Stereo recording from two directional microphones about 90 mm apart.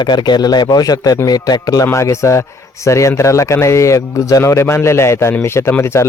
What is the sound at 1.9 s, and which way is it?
A man's voice, 35° left (ahead or behind).